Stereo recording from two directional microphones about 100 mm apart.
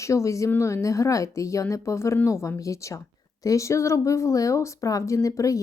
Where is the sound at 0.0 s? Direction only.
30° left (ahead or behind).